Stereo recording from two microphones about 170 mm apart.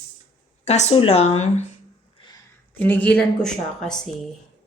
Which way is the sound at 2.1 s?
25° left (ahead or behind).